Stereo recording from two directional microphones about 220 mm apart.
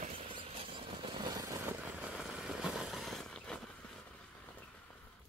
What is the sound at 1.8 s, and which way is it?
Vehicle, centre (ahead or behind).